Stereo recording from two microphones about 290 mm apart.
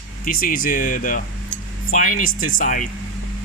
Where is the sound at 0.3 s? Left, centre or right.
Left.